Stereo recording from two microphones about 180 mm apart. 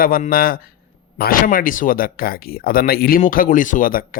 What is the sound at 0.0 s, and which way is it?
Speech, 50° left (ahead or behind).